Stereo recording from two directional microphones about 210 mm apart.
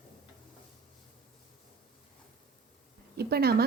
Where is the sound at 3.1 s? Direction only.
50° right (ahead or behind).